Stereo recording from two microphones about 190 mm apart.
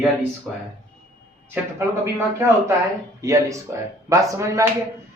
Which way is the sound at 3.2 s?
15° right (ahead or behind).